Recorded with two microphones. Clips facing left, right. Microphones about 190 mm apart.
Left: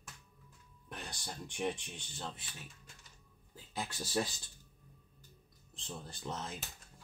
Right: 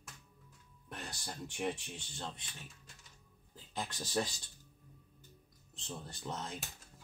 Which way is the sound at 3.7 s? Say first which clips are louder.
Even; 10° left (ahead or behind).